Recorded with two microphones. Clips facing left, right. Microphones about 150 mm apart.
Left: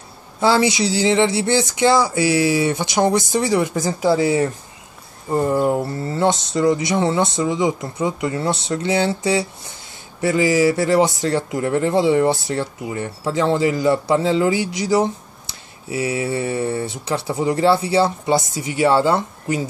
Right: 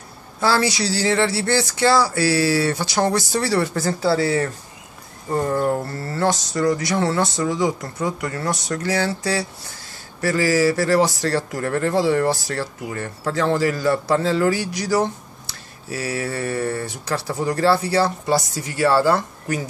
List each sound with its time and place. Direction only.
0.4 s speech: 20° left (ahead or behind)